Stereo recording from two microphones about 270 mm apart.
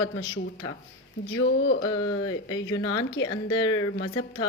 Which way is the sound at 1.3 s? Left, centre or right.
Left.